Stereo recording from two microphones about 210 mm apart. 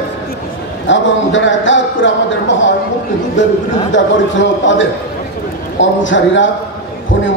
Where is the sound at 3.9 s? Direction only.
60° left (ahead or behind).